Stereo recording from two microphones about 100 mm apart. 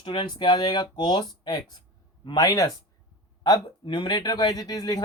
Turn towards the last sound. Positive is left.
turn(degrees=45)  # may be behind; listen again after turning